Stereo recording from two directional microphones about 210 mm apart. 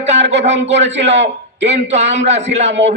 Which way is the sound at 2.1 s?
30° right (ahead or behind).